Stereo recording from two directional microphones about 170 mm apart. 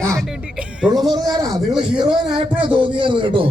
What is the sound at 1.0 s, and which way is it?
Music, 25° right (ahead or behind).